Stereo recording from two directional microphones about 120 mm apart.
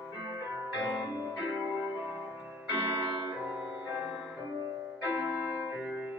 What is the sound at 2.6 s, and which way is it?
Music, 20° right (ahead or behind).